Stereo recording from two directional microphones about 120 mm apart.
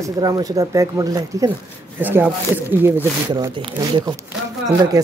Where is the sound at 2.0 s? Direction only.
15° right (ahead or behind).